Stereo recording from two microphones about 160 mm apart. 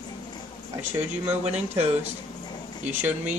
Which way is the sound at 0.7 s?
10° right (ahead or behind).